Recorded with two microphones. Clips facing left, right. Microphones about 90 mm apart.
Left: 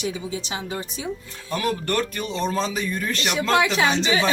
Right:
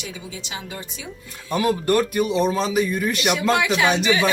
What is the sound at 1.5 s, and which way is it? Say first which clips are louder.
Speech: right 5 dB; 20° right (ahead or behind).